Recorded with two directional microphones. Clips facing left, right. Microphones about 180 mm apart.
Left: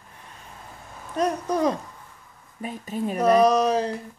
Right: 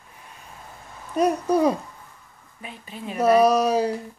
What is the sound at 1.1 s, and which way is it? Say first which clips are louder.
Speech: right 4 dB; 10° right (ahead or behind).